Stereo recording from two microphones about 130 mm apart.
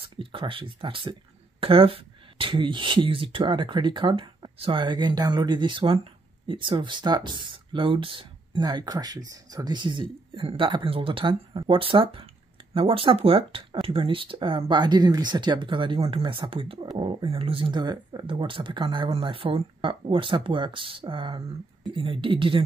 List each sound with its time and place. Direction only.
0.0 s speech: 40° right (ahead or behind)